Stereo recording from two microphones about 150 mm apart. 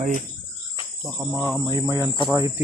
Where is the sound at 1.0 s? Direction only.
15° right (ahead or behind).